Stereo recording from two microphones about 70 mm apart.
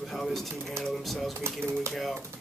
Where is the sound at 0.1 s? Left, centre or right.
Centre.